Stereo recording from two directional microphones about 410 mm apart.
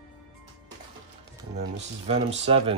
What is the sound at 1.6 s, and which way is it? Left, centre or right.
Speech, centre.